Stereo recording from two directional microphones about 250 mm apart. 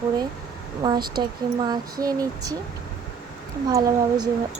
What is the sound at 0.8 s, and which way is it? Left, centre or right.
Speech, centre.